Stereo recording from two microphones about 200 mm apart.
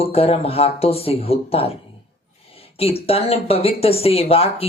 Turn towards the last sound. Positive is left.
turn(degrees=30)  # may be behind; listen again after turning